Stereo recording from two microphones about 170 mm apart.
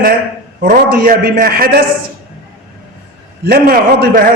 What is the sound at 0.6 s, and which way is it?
A man's voice, 60° right (ahead or behind).